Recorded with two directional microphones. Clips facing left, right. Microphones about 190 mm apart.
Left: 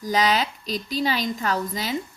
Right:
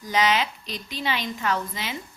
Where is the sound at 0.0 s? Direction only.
40° left (ahead or behind).